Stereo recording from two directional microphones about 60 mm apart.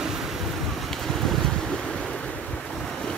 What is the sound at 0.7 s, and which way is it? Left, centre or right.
Waves, centre.